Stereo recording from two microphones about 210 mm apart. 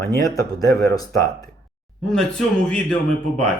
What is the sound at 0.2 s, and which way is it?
Speech, 15° left (ahead or behind).